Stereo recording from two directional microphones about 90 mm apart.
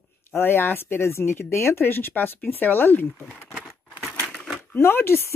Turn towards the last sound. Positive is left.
turn(degrees=25)  # may be behind; listen again after turning